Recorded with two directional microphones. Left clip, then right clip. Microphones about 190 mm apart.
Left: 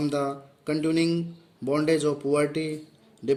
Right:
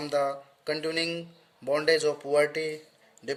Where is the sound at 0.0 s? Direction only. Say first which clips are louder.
Even; 15° right (ahead or behind).